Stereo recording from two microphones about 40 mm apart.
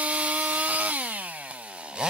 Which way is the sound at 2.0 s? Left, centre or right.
Right.